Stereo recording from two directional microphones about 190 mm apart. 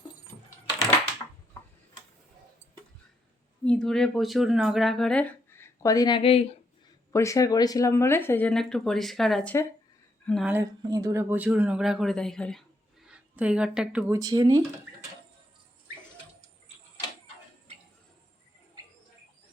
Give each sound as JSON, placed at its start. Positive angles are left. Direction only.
{"t": 3.6, "sound": "speech", "side_deg": 5}
{"t": 7.1, "sound": "speech", "side_deg": 15}
{"t": 10.5, "sound": "speech", "side_deg": -15}
{"t": 14.1, "sound": "speech", "side_deg": -20}